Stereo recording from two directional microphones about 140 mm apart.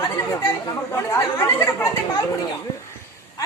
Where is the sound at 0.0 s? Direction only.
25° left (ahead or behind).